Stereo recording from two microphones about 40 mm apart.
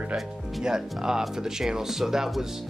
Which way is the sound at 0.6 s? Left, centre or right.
Centre.